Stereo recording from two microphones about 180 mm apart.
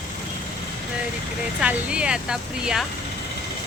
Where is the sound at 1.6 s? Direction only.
5° right (ahead or behind).